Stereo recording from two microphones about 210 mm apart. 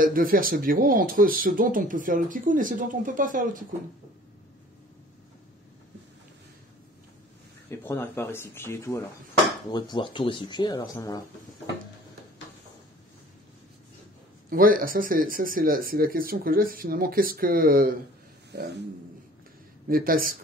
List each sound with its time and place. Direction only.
0.0 s speech: 40° right (ahead or behind)
7.8 s speech: 10° left (ahead or behind)
14.5 s speech: 40° right (ahead or behind)
19.9 s speech: 45° right (ahead or behind)